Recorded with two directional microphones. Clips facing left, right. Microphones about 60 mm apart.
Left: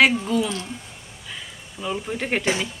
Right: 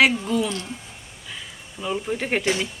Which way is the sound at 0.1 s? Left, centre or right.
Centre.